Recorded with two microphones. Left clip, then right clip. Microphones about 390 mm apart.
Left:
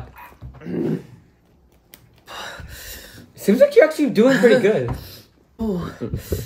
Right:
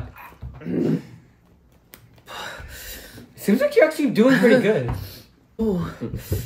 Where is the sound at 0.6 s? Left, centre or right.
Centre.